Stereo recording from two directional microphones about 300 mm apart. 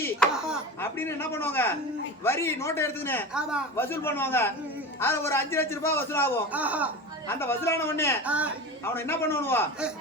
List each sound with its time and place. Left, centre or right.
0.0 s a man's voice: centre
6.5 s speech: centre
7.3 s a man's voice: centre
8.2 s speech: centre
8.8 s a man's voice: centre